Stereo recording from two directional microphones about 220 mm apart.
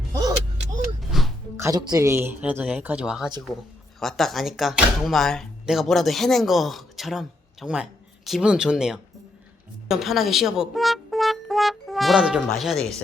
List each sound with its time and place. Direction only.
0.1 s vehicle: 15° right (ahead or behind)
1.1 s music: centre (ahead or behind)
1.5 s speech: 15° right (ahead or behind); by 13.0 s centre (ahead or behind)